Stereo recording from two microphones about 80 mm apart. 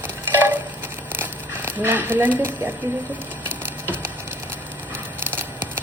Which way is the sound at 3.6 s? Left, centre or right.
Right.